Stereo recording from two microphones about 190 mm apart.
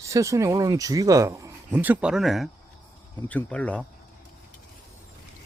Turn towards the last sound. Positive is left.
turn(degrees=5)  # may be behind; listen again after turning